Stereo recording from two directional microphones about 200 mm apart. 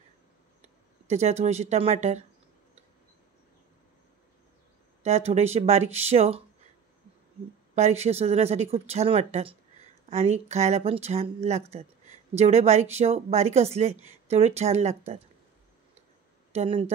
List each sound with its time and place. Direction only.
0.6 s speech: 35° right (ahead or behind)
5.0 s speech: 30° right (ahead or behind)
7.7 s speech: 35° right (ahead or behind)
16.5 s speech: 30° right (ahead or behind)